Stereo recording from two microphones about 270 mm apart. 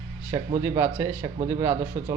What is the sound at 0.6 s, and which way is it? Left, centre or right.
A man's voice, centre.